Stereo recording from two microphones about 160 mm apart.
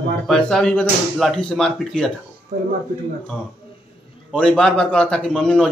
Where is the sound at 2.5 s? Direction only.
45° right (ahead or behind).